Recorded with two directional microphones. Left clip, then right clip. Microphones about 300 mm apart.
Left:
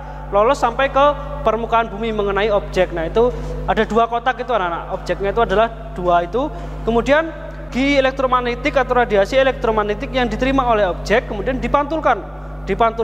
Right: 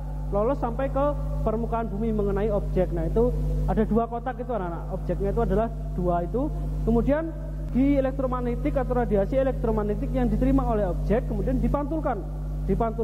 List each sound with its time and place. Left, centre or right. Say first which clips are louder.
0.3 s a man's voice: left 11 dB; centre
6.3 s a man's voice: left 8 dB; left
7.0 s a man's voice: left 11 dB; centre